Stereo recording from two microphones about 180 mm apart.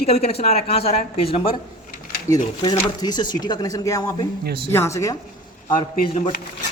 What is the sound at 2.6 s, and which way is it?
Speech, 25° left (ahead or behind).